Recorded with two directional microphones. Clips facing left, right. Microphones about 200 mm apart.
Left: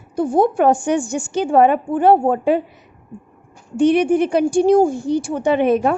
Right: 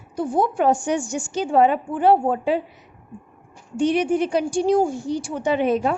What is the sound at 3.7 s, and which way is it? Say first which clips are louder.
A woman's voice: left 5 dB; 55° left (ahead or behind).